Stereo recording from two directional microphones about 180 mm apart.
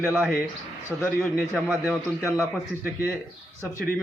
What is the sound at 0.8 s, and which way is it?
A man's voice, 10° left (ahead or behind).